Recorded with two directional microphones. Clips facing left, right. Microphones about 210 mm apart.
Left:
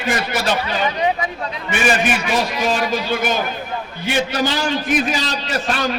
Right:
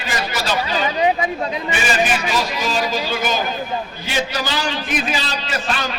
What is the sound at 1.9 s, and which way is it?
A man's voice, 55° left (ahead or behind).